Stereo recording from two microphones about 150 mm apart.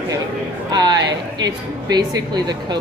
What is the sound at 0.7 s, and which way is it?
Speech, 30° right (ahead or behind).